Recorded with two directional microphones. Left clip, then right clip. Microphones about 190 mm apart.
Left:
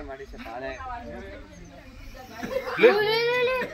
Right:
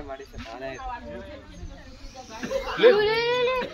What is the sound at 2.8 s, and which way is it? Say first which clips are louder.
Speech: right 1 dB; 45° left (ahead or behind).